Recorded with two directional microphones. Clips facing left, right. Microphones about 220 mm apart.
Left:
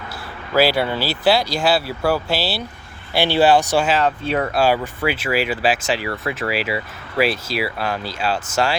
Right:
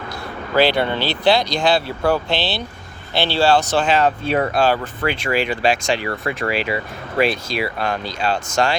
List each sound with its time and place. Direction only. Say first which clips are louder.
0.5 s speech: even; 5° left (ahead or behind)